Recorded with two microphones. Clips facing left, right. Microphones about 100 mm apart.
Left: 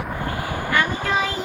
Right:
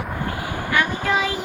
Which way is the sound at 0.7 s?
5° right (ahead or behind).